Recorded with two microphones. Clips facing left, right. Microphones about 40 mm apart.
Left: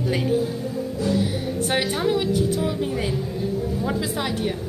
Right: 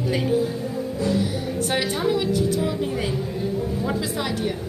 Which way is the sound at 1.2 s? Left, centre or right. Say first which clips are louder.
Even; left.